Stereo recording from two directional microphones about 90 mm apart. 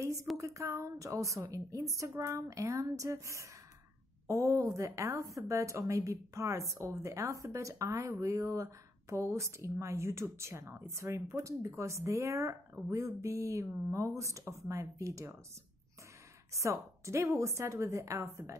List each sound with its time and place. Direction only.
0.0 s a sound: 35° right (ahead or behind)
0.4 s speech: 35° right (ahead or behind)
16.5 s speech: 35° right (ahead or behind)